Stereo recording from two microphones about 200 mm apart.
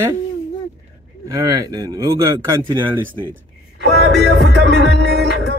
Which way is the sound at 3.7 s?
60° right (ahead or behind).